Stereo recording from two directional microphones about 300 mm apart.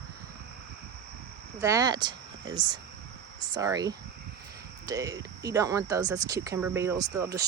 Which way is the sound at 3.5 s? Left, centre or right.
Centre.